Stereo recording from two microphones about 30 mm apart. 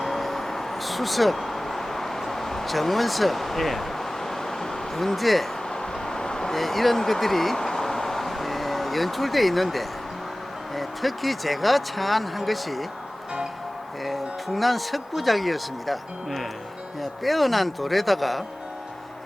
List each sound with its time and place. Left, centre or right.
0.0 s vehicle: centre
2.6 s a sound: centre
5.7 s vehicle: left
6.5 s speech: centre
7.5 s vehicle: centre
10.8 s speech: centre
14.0 s speech: centre